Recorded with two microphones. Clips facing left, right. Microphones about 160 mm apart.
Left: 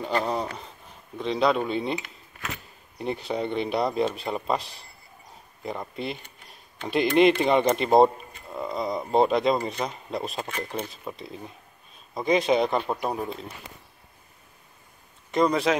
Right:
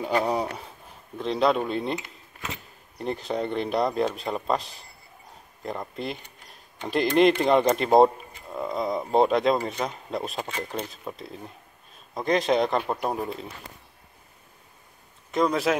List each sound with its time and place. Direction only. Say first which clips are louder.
0.0 s speech: right 2 dB; 10° right (ahead or behind)
1.1 s speech: even; centre (ahead or behind)
2.0 s a sound: even; 20° right (ahead or behind)
3.0 s speech: even; centre (ahead or behind)
15.3 s speech: left 1 dB; centre (ahead or behind)